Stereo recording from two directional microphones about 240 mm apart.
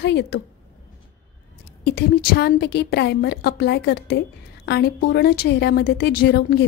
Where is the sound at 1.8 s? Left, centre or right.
Left.